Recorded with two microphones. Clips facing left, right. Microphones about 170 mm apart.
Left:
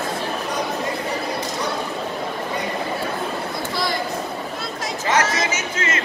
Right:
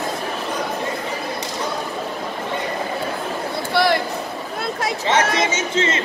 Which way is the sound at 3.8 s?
65° right (ahead or behind).